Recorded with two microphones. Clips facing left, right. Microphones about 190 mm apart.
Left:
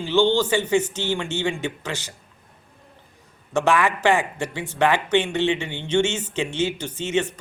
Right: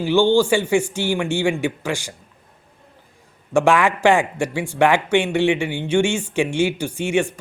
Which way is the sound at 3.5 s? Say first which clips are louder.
Right 4 dB; 15° right (ahead or behind).